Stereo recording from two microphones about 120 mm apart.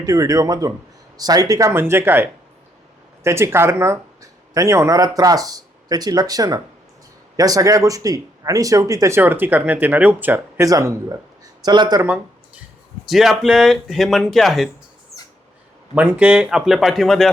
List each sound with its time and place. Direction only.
0.0 s speech: 30° right (ahead or behind)
10.7 s speech: 30° right (ahead or behind)
13.1 s speech: centre (ahead or behind)
16.0 s speech: 10° right (ahead or behind)